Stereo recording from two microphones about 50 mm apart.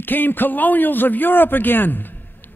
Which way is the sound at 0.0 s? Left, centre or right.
Left.